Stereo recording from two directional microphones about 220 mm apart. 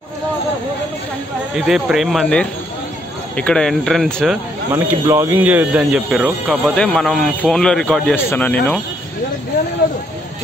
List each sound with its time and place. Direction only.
1.7 s speech: centre (ahead or behind)
4.7 s speech: 10° right (ahead or behind); by 8.5 s 5° left (ahead or behind)